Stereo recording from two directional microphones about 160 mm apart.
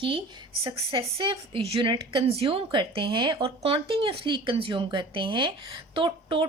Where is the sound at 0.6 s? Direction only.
35° right (ahead or behind).